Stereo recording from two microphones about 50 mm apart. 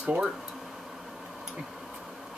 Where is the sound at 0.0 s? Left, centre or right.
Right.